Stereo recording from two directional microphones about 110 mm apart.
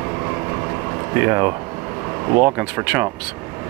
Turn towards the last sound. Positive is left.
turn(degrees=-15)  # may be behind; listen again after turning